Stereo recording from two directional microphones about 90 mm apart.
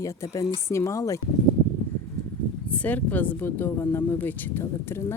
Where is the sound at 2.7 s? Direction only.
15° left (ahead or behind).